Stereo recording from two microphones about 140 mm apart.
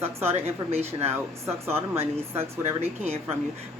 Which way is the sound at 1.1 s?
15° right (ahead or behind).